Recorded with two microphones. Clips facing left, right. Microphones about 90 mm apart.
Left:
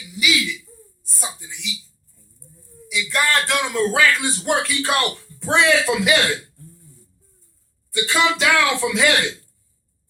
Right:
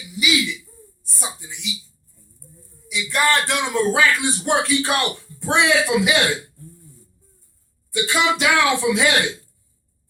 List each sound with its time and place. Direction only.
0.0 s a man's voice: 25° right (ahead or behind)
2.9 s a man's voice: 20° right (ahead or behind)
7.9 s a man's voice: 20° right (ahead or behind)